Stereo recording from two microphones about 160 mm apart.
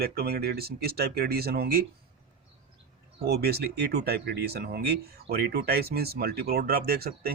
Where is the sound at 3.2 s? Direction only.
80° right.